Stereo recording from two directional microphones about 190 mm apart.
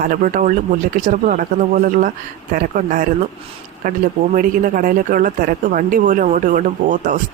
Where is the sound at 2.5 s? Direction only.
45° right (ahead or behind).